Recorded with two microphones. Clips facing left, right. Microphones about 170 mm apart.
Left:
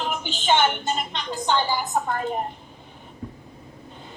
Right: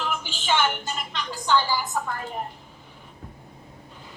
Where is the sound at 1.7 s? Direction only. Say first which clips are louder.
Left 2 dB; 50° left (ahead or behind).